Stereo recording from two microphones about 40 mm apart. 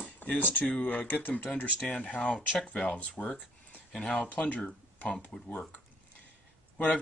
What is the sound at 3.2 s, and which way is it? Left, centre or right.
Speech, left.